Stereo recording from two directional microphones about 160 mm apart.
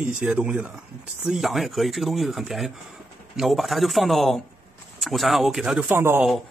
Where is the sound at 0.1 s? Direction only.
5° right (ahead or behind).